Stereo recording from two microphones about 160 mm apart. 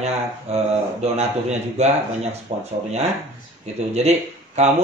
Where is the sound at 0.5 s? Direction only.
40° right (ahead or behind).